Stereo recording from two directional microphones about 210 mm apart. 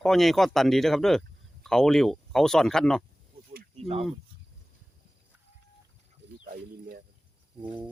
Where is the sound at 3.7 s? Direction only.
30° right (ahead or behind).